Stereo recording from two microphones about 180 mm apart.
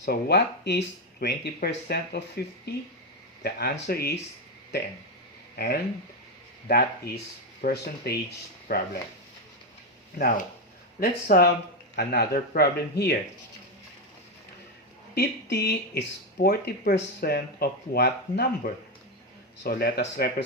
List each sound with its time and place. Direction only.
0.0 s speech: 70° left (ahead or behind)
5.5 s speech: 60° left (ahead or behind)
10.2 s speech: 50° left (ahead or behind)
15.1 s speech: 65° left (ahead or behind)